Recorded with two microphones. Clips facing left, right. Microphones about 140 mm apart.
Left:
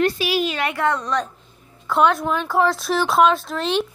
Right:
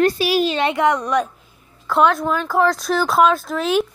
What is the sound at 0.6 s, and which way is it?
Speech, 20° right (ahead or behind).